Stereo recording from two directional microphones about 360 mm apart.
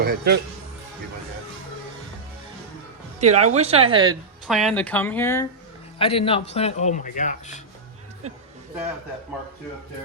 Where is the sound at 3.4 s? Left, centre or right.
Centre.